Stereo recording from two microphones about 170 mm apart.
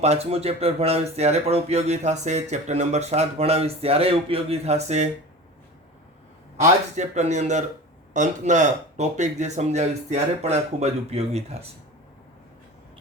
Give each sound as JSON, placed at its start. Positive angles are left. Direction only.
{"t": 0.0, "sound": "speech", "side_deg": -40}
{"t": 6.6, "sound": "speech", "side_deg": -45}